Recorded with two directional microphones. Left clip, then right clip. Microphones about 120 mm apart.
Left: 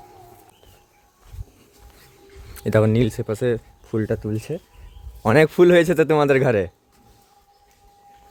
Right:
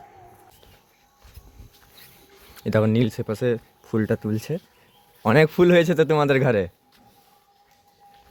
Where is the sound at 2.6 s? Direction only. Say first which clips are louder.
Left 3 dB; 15° left (ahead or behind).